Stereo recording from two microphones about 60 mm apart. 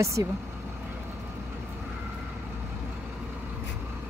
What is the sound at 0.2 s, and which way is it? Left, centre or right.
Speech, right.